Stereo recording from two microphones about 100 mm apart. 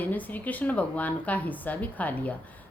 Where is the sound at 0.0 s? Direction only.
15° left (ahead or behind).